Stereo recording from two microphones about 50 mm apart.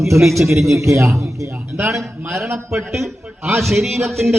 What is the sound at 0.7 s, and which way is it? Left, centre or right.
Speech, right.